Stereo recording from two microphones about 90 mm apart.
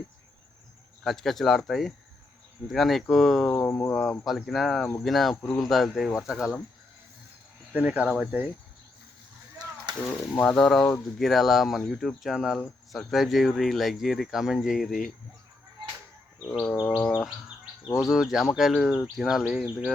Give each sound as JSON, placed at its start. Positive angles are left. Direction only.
{"t": 1.0, "sound": "speech", "side_deg": 5}
{"t": 3.5, "sound": "speech", "side_deg": 20}
{"t": 3.8, "sound": "speech", "side_deg": 10}
{"t": 5.4, "sound": "speech", "side_deg": 10}
{"t": 5.6, "sound": "speech", "side_deg": 0}
{"t": 7.7, "sound": "speech", "side_deg": -15}
{"t": 10.3, "sound": "speech", "side_deg": 10}
{"t": 16.5, "sound": "bird", "side_deg": 5}
{"t": 16.9, "sound": "speech", "side_deg": 20}
{"t": 18.0, "sound": "speech", "side_deg": -5}